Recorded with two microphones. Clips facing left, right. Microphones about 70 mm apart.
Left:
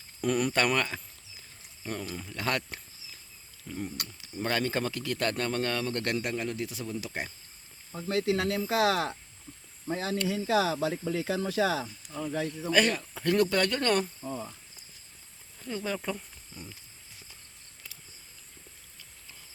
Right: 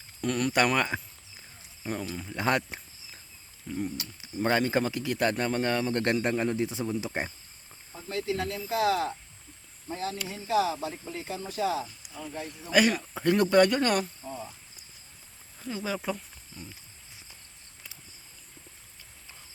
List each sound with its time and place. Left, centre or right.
0.2 s speech: centre
0.8 s speech: centre
2.2 s speech: right
3.7 s speech: centre
4.4 s speech: centre
8.0 s speech: left
10.2 s speech: left
12.7 s speech: centre
13.1 s speech: right
15.6 s speech: centre
16.5 s wild animals: centre